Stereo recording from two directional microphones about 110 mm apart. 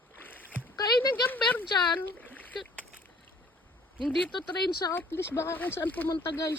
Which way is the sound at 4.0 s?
5° right (ahead or behind).